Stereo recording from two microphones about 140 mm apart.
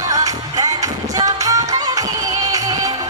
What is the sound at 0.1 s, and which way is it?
Music, 25° right (ahead or behind).